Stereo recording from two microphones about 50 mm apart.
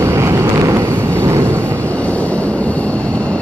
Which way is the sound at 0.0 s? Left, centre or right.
Right.